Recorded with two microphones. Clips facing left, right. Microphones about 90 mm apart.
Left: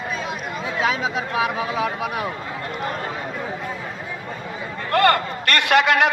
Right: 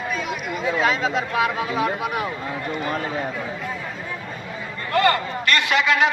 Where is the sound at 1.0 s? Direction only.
15° left (ahead or behind).